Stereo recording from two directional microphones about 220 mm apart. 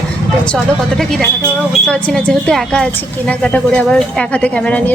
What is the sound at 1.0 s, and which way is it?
A woman's voice, centre (ahead or behind).